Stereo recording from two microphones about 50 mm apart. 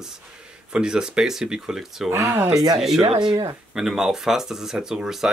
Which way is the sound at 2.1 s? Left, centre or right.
Right.